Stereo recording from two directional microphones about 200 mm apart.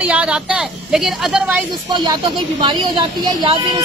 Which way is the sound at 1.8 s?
20° right (ahead or behind).